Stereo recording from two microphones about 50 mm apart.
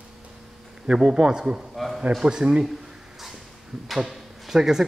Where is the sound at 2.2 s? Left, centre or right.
Centre.